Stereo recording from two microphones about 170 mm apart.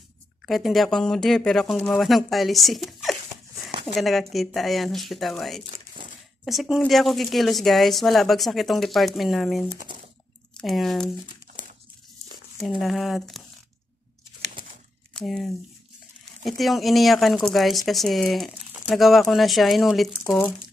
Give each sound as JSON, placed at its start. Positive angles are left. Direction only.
{"t": 0.5, "sound": "a woman's voice", "side_deg": 0}
{"t": 9.8, "sound": "crumpling", "side_deg": -30}
{"t": 10.6, "sound": "a woman's voice", "side_deg": 0}
{"t": 12.6, "sound": "a woman's voice", "side_deg": 0}
{"t": 15.1, "sound": "a woman's voice", "side_deg": 0}